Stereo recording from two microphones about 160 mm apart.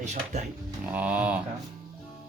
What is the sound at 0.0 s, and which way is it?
Speech, 50° right (ahead or behind).